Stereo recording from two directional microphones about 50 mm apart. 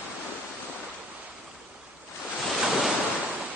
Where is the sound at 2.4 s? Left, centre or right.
Centre.